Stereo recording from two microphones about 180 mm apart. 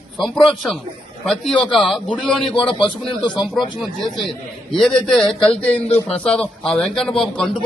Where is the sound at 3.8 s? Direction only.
Centre (ahead or behind).